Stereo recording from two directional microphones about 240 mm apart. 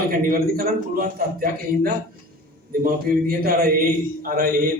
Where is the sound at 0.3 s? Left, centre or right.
Right.